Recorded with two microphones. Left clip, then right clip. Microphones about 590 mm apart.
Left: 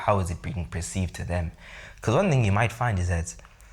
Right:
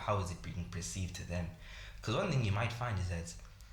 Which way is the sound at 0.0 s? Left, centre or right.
Left.